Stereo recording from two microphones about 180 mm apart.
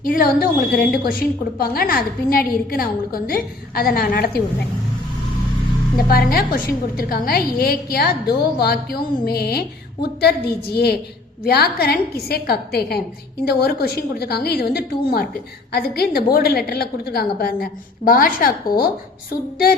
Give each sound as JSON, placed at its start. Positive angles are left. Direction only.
{"t": 0.0, "sound": "a woman's voice", "side_deg": 55}
{"t": 6.1, "sound": "a woman's voice", "side_deg": 55}